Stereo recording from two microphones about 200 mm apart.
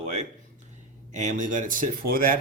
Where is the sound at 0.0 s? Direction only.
35° right (ahead or behind).